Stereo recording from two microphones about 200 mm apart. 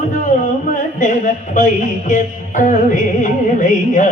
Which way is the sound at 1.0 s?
40° left (ahead or behind).